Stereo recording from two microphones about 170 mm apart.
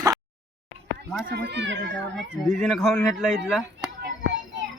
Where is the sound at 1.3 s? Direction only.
80° right.